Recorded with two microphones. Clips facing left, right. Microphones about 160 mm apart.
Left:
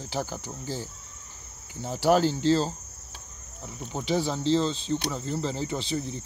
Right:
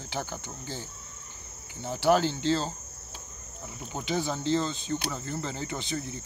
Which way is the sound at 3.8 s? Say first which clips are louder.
Left 4 dB; centre (ahead or behind).